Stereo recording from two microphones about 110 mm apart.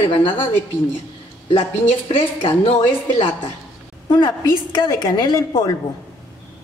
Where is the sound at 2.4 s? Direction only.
55° left (ahead or behind).